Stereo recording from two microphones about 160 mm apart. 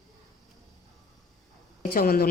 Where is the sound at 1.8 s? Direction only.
65° left (ahead or behind).